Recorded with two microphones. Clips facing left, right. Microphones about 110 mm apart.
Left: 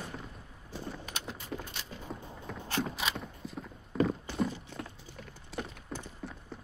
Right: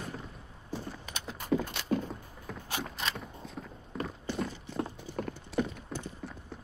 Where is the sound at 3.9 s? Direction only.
Centre (ahead or behind).